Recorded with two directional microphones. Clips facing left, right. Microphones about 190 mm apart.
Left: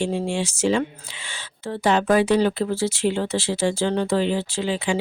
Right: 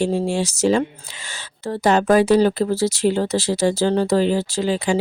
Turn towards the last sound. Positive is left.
turn(degrees=-40)  # may be behind; listen again after turning